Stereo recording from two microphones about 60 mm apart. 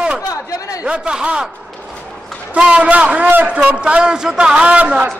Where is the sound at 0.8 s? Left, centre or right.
Centre.